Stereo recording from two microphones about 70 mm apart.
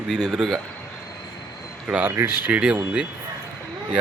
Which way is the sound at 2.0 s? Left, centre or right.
Right.